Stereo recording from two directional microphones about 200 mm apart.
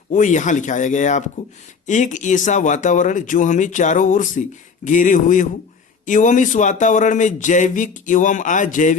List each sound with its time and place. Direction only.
0.1 s speech: 40° left (ahead or behind)